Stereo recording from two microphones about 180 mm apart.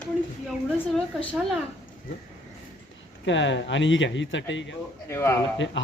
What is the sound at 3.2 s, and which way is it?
Speech, 90° left.